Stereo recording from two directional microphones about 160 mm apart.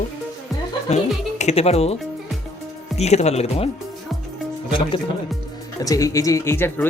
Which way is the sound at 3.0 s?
45° left (ahead or behind).